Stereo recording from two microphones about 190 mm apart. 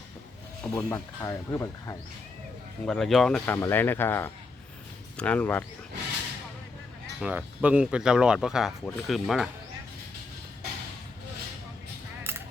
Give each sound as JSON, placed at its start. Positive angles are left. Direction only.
{"t": 0.6, "sound": "speech", "side_deg": 10}
{"t": 2.8, "sound": "speech", "side_deg": 5}
{"t": 7.2, "sound": "speech", "side_deg": -5}